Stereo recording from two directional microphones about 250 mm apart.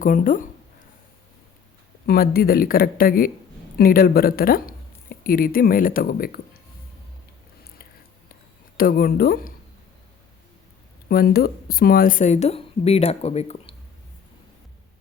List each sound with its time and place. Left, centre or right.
0.0 s speech: left
2.0 s speech: left
8.8 s speech: left
11.1 s a woman's voice: left